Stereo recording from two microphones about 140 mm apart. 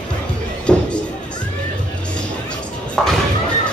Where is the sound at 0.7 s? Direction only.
5° left (ahead or behind).